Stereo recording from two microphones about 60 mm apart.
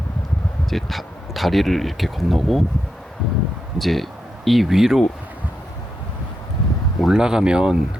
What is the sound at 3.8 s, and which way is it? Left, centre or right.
Speech, centre.